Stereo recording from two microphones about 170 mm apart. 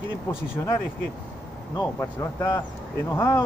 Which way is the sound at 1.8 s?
20° left (ahead or behind).